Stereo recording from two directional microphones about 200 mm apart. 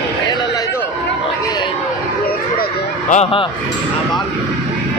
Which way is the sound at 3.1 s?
30° left (ahead or behind).